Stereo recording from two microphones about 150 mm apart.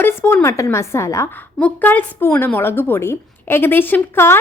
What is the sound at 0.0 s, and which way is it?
A woman's voice, 15° left (ahead or behind).